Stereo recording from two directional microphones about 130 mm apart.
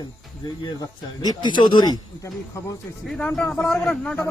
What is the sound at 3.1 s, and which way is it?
Speech, 5° left (ahead or behind).